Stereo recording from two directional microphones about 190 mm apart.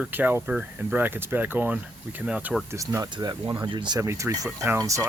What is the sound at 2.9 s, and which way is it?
Speech, 20° right (ahead or behind).